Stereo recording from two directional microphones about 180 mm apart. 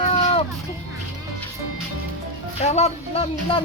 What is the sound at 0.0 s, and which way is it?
Music, 35° left (ahead or behind).